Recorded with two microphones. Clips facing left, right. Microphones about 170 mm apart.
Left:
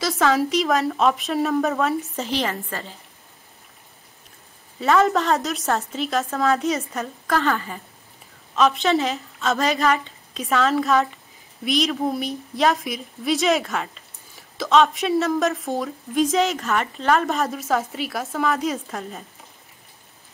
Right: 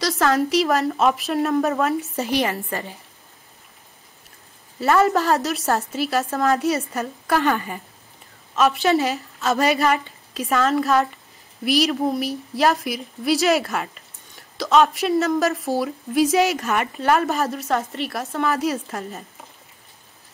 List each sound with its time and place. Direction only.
0.0 s a woman's voice: centre (ahead or behind)
2.6 s a woman's voice: 15° right (ahead or behind)
4.7 s a woman's voice: centre (ahead or behind)
7.3 s a woman's voice: 15° right (ahead or behind)
8.5 s a woman's voice: 5° right (ahead or behind)